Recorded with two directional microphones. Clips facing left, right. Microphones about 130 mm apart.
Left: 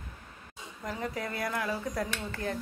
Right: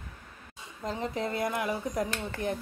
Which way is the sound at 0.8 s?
25° right (ahead or behind).